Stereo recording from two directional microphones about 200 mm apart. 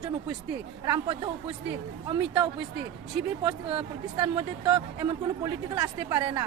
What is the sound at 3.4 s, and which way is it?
Speech, 25° right (ahead or behind).